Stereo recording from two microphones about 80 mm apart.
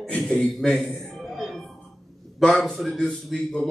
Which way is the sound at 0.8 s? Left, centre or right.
Centre.